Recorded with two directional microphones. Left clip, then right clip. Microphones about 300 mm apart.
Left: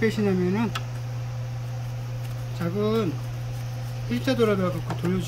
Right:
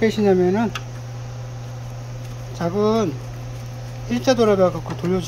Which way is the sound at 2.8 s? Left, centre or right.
Centre.